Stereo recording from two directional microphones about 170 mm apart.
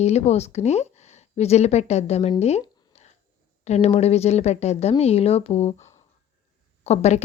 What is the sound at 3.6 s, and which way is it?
A woman's voice, 40° left (ahead or behind).